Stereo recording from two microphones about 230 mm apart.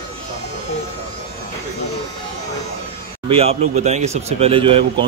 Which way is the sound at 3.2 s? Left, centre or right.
Right.